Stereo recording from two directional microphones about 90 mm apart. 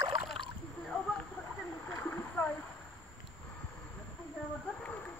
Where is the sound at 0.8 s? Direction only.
5° left (ahead or behind).